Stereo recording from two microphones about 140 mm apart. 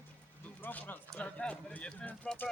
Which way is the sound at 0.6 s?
15° left (ahead or behind).